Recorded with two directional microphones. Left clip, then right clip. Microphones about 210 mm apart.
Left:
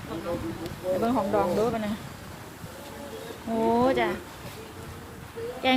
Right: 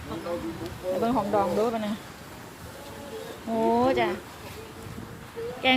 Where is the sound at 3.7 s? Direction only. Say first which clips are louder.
Even; 5° right (ahead or behind).